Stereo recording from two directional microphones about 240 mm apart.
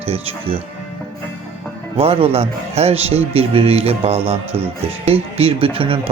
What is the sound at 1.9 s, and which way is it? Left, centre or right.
Speech, right.